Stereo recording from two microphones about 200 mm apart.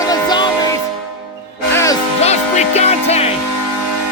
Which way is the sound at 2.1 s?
35° left (ahead or behind).